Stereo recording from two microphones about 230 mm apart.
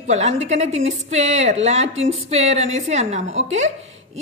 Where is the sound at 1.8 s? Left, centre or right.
Right.